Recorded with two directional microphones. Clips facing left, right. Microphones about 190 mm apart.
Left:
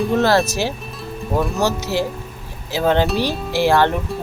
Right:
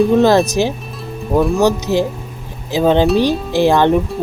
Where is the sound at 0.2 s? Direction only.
15° right (ahead or behind).